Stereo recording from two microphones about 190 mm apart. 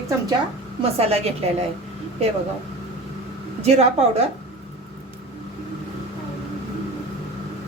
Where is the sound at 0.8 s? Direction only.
30° right (ahead or behind).